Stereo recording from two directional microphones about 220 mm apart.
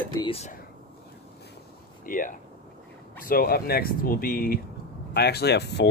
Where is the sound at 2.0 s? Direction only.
40° left (ahead or behind).